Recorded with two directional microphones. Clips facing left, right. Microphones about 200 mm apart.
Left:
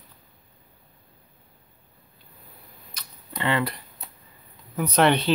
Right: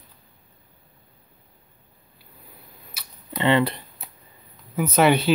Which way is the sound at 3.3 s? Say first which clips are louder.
Right 6 dB; 25° right (ahead or behind).